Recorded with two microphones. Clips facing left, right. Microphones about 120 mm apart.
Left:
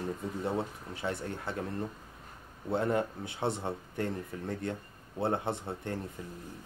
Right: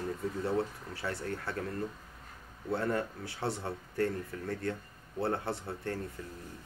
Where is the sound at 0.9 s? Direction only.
20° left (ahead or behind).